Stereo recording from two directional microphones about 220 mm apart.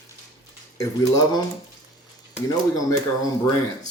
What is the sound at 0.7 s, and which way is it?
Speech, 15° left (ahead or behind).